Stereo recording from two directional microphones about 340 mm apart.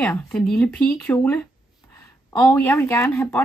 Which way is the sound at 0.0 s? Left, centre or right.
Centre.